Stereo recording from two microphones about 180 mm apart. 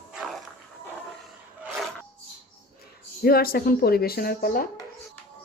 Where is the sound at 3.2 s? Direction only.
55° left (ahead or behind).